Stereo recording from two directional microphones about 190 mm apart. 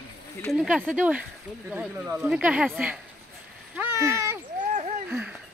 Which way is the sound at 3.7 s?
10° right (ahead or behind).